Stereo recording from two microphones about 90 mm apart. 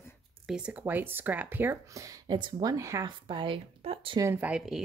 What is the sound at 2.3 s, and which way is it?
Speech, 60° right (ahead or behind).